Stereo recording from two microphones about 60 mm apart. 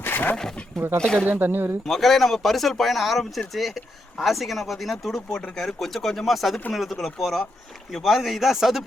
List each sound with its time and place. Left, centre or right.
0.0 s wild animals: left
0.3 s speech: centre
1.3 s speech: right
1.9 s speech: centre